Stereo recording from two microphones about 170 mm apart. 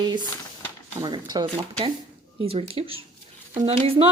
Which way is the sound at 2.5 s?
35° right (ahead or behind).